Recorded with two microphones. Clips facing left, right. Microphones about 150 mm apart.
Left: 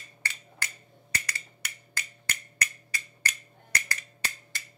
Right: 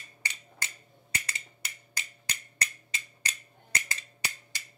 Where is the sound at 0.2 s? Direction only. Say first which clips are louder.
Left 2 dB; 20° right (ahead or behind).